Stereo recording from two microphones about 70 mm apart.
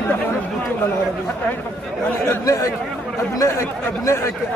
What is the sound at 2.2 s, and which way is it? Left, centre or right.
Speech, left.